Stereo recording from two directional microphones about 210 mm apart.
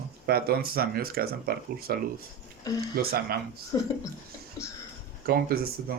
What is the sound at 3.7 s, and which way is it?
Speech, 15° left (ahead or behind).